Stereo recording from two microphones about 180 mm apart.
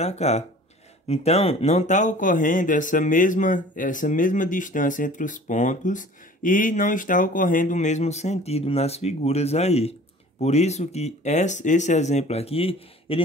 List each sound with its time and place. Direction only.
0.0 s speech: 35° left (ahead or behind)